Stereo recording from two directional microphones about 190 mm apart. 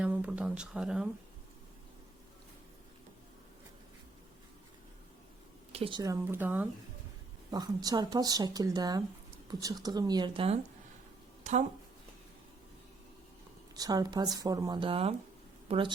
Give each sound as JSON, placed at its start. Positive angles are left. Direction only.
{"t": 0.0, "sound": "speech", "side_deg": -5}
{"t": 5.7, "sound": "speech", "side_deg": -30}
{"t": 6.0, "sound": "speech", "side_deg": -15}
{"t": 7.5, "sound": "speech", "side_deg": -20}
{"t": 13.7, "sound": "a woman's voice", "side_deg": -20}